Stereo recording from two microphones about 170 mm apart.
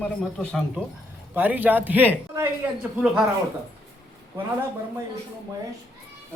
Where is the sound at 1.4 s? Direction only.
10° right (ahead or behind).